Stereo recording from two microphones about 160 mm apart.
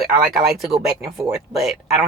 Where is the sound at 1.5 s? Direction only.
Centre (ahead or behind).